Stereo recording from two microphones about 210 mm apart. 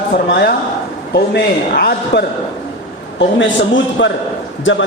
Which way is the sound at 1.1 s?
50° left (ahead or behind).